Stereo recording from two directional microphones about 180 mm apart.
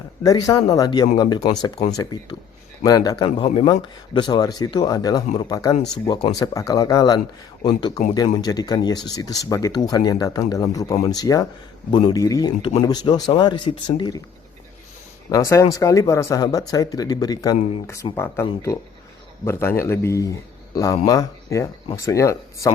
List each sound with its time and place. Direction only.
0.2 s speech: 20° left (ahead or behind)
2.8 s speech: 20° left (ahead or behind)
15.3 s speech: 15° left (ahead or behind)
19.5 s speech: 15° left (ahead or behind)